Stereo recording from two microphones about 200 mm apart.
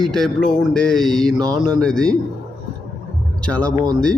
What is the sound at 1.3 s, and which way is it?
Mantra, 20° right (ahead or behind).